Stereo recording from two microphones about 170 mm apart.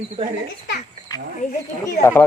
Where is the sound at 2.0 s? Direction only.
15° left (ahead or behind).